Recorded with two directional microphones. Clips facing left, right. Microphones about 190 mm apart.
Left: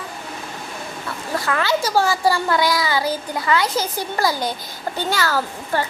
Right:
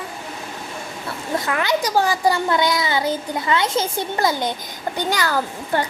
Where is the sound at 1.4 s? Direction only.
20° right (ahead or behind).